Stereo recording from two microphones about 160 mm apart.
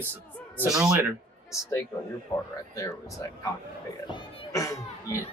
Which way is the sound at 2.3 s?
35° left (ahead or behind).